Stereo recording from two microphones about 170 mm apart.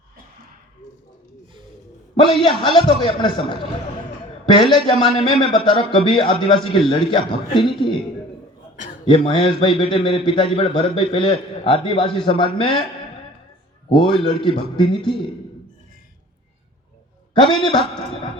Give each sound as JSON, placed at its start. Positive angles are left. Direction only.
{"t": 2.4, "sound": "a man's voice", "side_deg": 30}
{"t": 4.7, "sound": "a man's voice", "side_deg": 30}
{"t": 8.7, "sound": "a sound", "side_deg": 50}
{"t": 9.0, "sound": "a man's voice", "side_deg": 30}
{"t": 14.0, "sound": "a man's voice", "side_deg": 30}
{"t": 17.4, "sound": "a man's voice", "side_deg": 25}